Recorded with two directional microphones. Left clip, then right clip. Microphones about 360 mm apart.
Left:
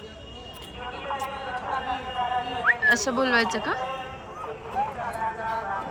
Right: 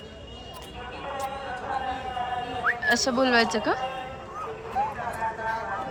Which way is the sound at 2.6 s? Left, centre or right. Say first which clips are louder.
Left 3 dB; centre.